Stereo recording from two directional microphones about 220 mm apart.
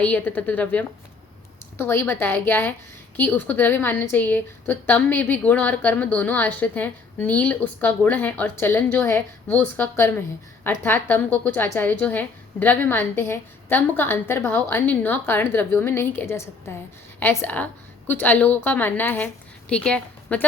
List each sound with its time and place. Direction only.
0.0 s a woman's voice: 5° left (ahead or behind)